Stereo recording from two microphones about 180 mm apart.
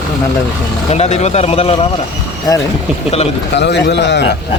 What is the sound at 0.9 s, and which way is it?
Speech, 35° left (ahead or behind).